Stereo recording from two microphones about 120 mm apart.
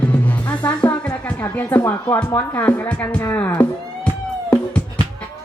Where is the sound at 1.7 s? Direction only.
25° left (ahead or behind).